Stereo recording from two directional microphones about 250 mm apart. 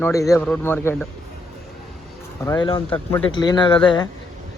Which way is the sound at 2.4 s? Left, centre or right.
Centre.